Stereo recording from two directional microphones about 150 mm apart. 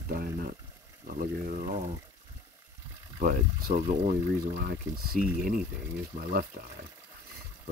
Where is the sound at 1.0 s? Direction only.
65° right (ahead or behind).